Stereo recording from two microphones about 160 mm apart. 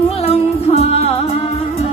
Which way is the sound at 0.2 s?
40° left (ahead or behind).